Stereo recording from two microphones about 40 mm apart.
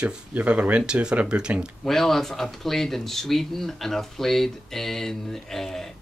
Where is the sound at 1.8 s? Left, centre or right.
Centre.